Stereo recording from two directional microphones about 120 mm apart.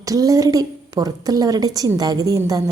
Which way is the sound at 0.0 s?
30° right (ahead or behind).